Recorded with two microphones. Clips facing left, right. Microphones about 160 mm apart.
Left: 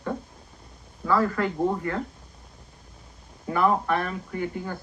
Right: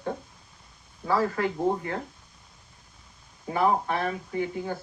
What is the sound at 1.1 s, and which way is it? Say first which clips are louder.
Speech: left 2 dB; 55° left (ahead or behind).